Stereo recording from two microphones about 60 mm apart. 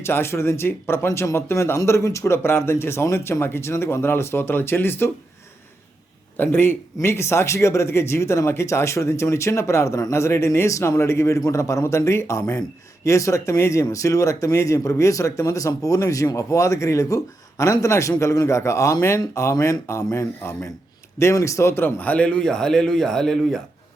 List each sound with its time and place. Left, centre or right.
0.0 s speech: left
6.3 s speech: left; by 23.6 s centre